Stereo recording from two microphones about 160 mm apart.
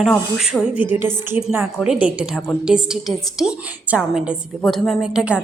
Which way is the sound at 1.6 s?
5° right (ahead or behind).